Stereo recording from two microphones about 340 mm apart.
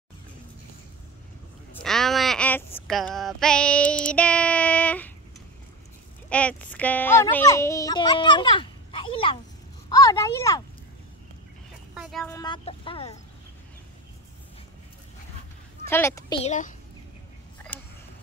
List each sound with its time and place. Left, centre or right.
1.8 s child singing: centre
6.2 s speech: centre
11.9 s speech: centre
15.9 s a woman's voice: centre
16.4 s a child's voice: left